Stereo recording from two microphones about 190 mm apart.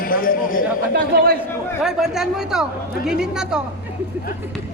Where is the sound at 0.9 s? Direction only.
55° right (ahead or behind).